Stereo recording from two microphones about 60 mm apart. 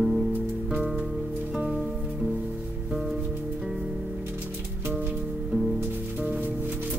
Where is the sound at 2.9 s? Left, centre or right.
Centre.